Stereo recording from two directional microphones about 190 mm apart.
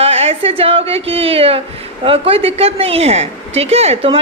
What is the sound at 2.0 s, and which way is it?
A woman's voice, 30° right (ahead or behind).